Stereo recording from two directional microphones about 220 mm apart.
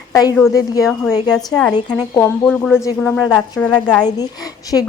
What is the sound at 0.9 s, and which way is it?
A woman's voice, 5° left (ahead or behind).